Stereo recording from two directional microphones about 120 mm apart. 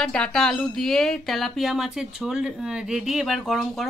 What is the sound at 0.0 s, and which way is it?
Speech, 5° left (ahead or behind).